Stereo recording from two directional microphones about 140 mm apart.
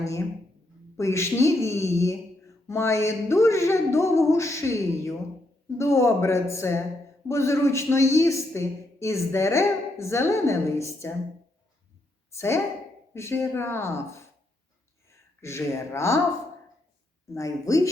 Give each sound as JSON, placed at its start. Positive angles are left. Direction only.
{"t": 0.9, "sound": "a man's voice", "side_deg": 20}
{"t": 12.3, "sound": "a woman's voice", "side_deg": 20}
{"t": 17.2, "sound": "a man's voice", "side_deg": 20}